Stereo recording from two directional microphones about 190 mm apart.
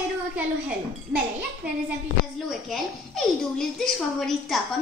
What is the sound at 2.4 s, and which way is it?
Speech, centre (ahead or behind).